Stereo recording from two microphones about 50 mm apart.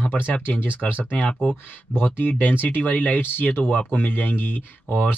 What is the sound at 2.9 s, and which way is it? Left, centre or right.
Speech, left.